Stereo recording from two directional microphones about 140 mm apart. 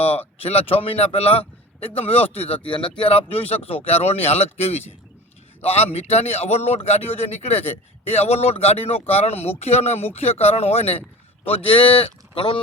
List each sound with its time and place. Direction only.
0.0 s a man's voice: 45° left (ahead or behind)